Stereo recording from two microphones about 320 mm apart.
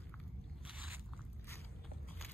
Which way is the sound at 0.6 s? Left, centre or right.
Centre.